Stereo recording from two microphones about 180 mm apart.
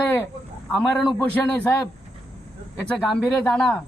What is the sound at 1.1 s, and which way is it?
Speech, 10° left (ahead or behind).